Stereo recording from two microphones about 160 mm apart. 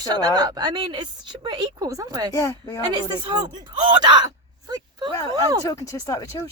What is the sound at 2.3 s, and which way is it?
Speech, 20° left (ahead or behind).